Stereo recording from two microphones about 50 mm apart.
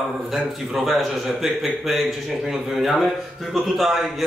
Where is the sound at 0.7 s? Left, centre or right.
Centre.